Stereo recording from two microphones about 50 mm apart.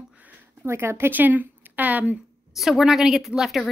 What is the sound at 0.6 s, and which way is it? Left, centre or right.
Speech, right.